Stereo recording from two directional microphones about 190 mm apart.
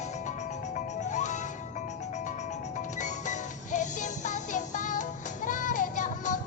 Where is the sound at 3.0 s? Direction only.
40° left (ahead or behind).